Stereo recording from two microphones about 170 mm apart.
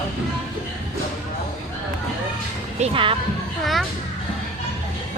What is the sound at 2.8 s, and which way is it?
Speech, 30° right (ahead or behind).